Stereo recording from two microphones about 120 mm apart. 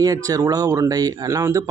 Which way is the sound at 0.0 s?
30° right (ahead or behind).